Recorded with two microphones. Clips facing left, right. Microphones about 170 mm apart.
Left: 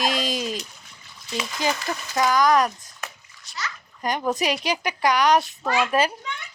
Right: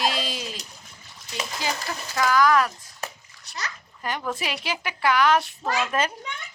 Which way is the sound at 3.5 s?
65° right (ahead or behind).